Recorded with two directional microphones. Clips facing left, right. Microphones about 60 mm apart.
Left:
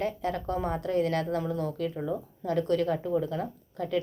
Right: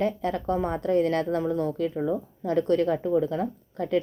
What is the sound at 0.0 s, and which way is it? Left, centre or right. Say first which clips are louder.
A woman's voice: right 4 dB; right.